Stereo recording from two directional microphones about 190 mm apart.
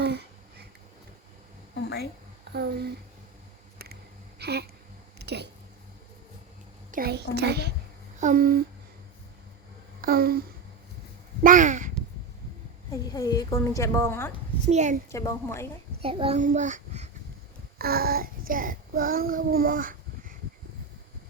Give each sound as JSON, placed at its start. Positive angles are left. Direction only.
{"t": 0.0, "sound": "a sound", "side_deg": -60}
{"t": 1.7, "sound": "a sound", "side_deg": 60}
{"t": 2.5, "sound": "a child's voice", "side_deg": -60}
{"t": 4.4, "sound": "a sound", "side_deg": -60}
{"t": 5.2, "sound": "speech", "side_deg": -60}
{"t": 6.9, "sound": "a child's voice", "side_deg": -55}
{"t": 8.2, "sound": "speech", "side_deg": -45}
{"t": 10.0, "sound": "speech", "side_deg": -50}
{"t": 11.4, "sound": "speech", "side_deg": -40}
{"t": 13.1, "sound": "a woman's voice", "side_deg": 20}
{"t": 14.7, "sound": "speech", "side_deg": -40}
{"t": 15.1, "sound": "a woman's voice", "side_deg": 15}
{"t": 16.0, "sound": "a child's voice", "side_deg": -30}
{"t": 17.7, "sound": "child singing", "side_deg": -55}